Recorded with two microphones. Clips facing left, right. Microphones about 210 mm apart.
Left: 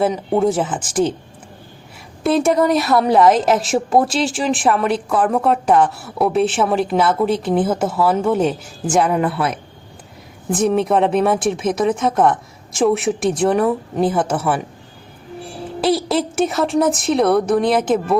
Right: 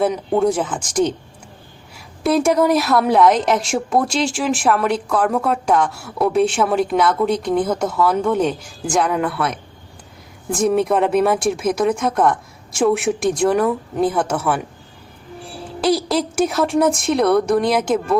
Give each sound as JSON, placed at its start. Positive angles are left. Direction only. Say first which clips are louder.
{"t": 0.3, "sound": "a woman's voice", "louder": "left 1 dB", "side_deg": 5}
{"t": 2.2, "sound": "a woman's voice", "louder": "even", "side_deg": 0}
{"t": 9.3, "sound": "a man's voice", "louder": "left 1 dB", "side_deg": 30}
{"t": 10.5, "sound": "a woman's voice", "louder": "left 1 dB", "side_deg": 0}
{"t": 15.8, "sound": "a woman's voice", "louder": "even", "side_deg": 0}